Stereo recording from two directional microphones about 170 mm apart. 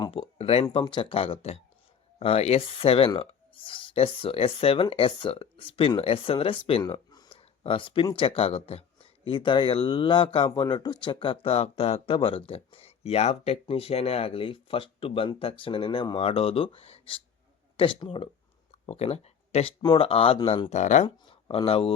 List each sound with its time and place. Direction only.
0.0 s speech: 30° left (ahead or behind)
6.8 s speech: 20° left (ahead or behind)
18.7 s a sound: 35° left (ahead or behind)
19.8 s speech: 30° left (ahead or behind)
21.2 s speech: 30° left (ahead or behind)